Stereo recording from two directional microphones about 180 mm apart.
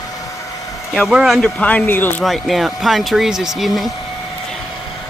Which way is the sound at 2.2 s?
Centre (ahead or behind).